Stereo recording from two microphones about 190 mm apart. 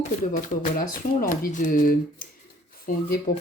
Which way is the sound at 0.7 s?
45° left (ahead or behind).